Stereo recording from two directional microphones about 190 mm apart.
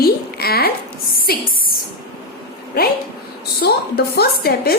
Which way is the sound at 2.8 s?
50° left (ahead or behind).